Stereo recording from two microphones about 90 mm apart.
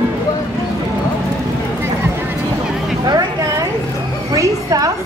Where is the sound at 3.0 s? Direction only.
45° right (ahead or behind).